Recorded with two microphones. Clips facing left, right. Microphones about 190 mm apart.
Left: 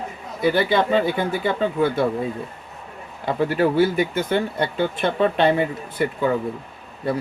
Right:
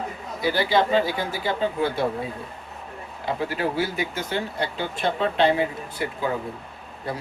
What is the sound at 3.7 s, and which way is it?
Speech, 55° left (ahead or behind).